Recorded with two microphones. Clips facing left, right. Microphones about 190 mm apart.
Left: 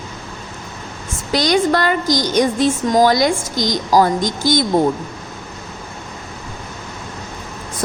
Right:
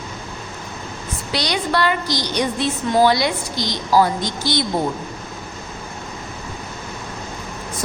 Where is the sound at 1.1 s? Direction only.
45° left (ahead or behind).